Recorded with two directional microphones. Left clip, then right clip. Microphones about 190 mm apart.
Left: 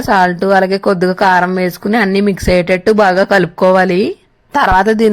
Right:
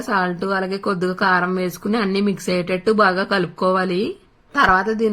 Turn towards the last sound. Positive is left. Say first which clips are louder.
# left 6 dB
turn(degrees=50)  # may be behind; listen again after turning